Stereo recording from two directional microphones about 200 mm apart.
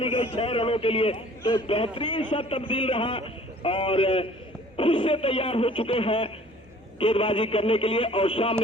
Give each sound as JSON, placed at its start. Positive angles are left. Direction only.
{"t": 0.0, "sound": "a man's voice", "side_deg": 30}